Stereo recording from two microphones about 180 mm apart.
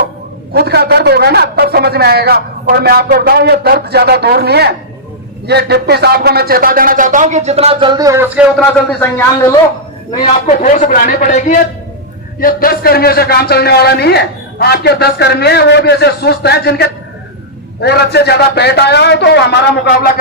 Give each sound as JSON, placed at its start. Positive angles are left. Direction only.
{"t": 0.5, "sound": "a man's voice", "side_deg": -65}
{"t": 8.5, "sound": "speech", "side_deg": 10}
{"t": 10.4, "sound": "speech", "side_deg": 40}
{"t": 12.4, "sound": "a man's voice", "side_deg": 55}